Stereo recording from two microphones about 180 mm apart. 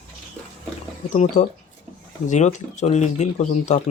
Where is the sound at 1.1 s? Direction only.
40° left (ahead or behind).